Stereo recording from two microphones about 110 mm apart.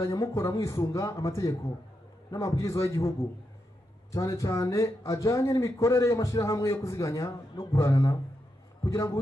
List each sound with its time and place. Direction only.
0.0 s speech: 25° left (ahead or behind)
4.1 s speech: 30° left (ahead or behind)